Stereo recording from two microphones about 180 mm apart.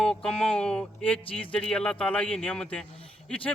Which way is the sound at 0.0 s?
5° left (ahead or behind).